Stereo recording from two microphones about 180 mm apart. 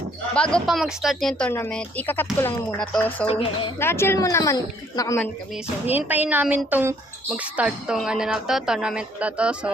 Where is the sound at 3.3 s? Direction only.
30° left (ahead or behind).